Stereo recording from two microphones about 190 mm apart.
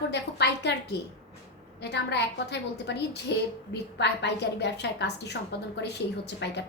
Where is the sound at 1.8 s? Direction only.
65° left (ahead or behind).